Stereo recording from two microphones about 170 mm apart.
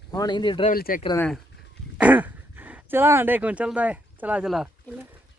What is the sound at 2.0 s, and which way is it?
Speech, 10° right (ahead or behind).